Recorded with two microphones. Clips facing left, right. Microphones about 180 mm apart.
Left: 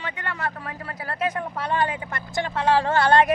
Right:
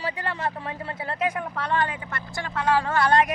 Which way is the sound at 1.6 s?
10° left (ahead or behind).